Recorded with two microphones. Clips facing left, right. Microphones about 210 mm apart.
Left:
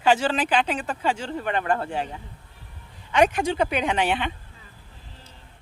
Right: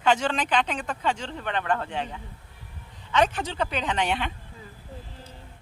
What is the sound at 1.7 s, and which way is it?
Speech, 40° left (ahead or behind).